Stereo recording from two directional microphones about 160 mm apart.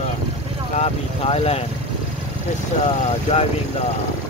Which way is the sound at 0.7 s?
40° left (ahead or behind).